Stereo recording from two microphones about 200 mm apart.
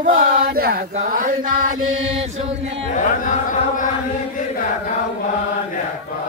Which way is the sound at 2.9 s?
40° left (ahead or behind).